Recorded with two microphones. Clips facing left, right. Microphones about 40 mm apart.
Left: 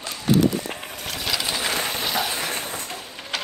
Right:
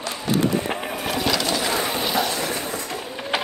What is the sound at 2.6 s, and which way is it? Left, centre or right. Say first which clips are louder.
Fireworks: right 3 dB; right.